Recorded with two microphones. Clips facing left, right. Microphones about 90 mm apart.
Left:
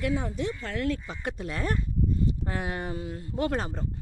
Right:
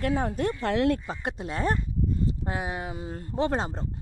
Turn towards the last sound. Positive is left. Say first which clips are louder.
# right 2 dB
turn(degrees=-30)  # may be behind; listen again after turning